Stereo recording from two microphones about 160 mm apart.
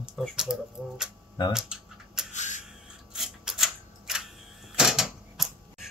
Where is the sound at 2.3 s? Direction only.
45° left (ahead or behind).